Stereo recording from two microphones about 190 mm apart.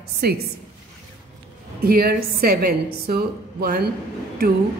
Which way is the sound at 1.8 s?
55° right (ahead or behind).